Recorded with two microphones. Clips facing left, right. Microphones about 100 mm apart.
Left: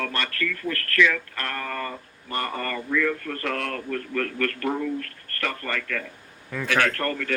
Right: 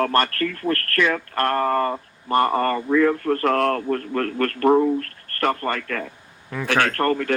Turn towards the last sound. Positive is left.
turn(degrees=-40)  # may be behind; listen again after turning